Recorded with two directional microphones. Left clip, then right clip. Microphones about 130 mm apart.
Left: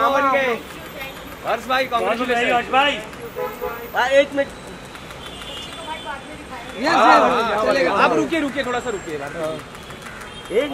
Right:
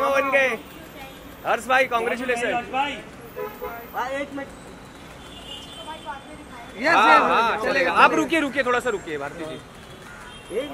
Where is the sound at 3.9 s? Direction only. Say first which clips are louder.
Left 12 dB; 35° left (ahead or behind).